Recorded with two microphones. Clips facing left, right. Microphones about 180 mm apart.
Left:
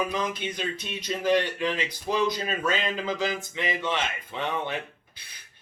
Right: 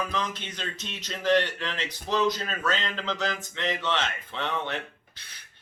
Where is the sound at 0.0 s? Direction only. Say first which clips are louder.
Left 3 dB; 10° left (ahead or behind).